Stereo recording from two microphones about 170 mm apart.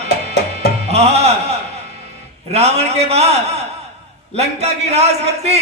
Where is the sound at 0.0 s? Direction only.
40° right (ahead or behind).